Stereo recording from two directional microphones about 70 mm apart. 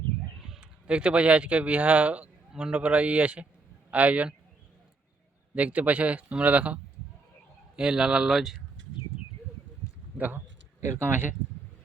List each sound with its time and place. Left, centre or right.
0.6 s a man's voice: centre
5.5 s speech: right
7.8 s speech: centre
10.2 s speech: right
10.8 s a sound: right
11.0 s speech: right